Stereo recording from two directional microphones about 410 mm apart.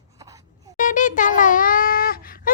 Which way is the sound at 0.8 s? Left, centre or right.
Centre.